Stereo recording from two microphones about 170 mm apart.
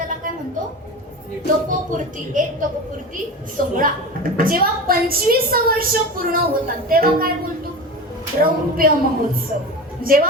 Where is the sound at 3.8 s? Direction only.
55° right (ahead or behind).